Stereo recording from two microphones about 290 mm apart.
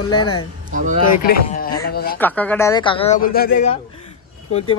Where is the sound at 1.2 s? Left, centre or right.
Left.